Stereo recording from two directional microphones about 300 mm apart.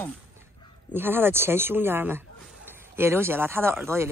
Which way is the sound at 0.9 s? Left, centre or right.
Centre.